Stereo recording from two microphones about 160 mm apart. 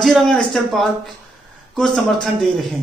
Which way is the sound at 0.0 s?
Centre (ahead or behind).